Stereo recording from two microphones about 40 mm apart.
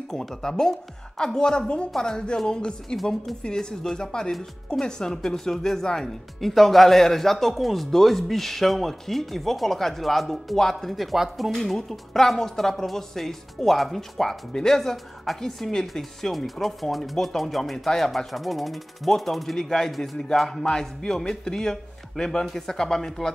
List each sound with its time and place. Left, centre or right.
0.1 s a man's voice: centre
3.0 s a woman's voice: centre
3.4 s a man's voice: centre
11.5 s a woman's voice: centre